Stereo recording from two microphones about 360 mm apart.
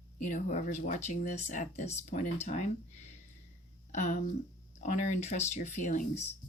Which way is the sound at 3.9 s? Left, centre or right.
Left.